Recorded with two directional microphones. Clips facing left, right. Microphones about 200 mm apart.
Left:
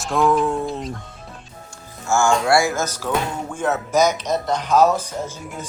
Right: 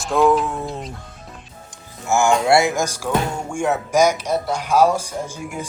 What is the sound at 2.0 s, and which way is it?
Speech, 15° right (ahead or behind).